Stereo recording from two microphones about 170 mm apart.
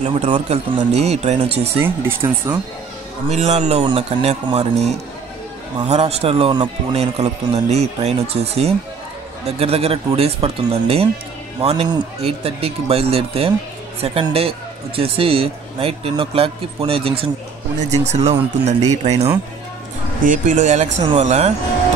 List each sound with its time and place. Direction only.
0.0 s speech: 40° right (ahead or behind)
1.8 s speech: 10° right (ahead or behind)
3.3 s speech: 40° right (ahead or behind)
20.2 s speech: 50° right (ahead or behind)